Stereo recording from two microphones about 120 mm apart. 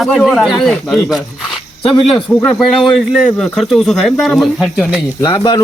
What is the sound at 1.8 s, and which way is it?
Speech, 50° left (ahead or behind).